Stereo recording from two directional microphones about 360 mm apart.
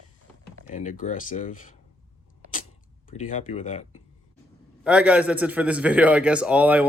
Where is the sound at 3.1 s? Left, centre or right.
Centre.